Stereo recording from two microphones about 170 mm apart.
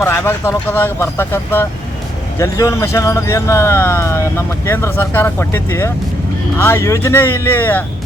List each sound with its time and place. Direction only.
0.0 s speech: 15° left (ahead or behind)